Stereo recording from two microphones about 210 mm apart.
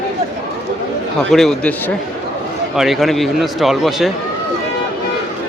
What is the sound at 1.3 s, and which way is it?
Speech, centre (ahead or behind).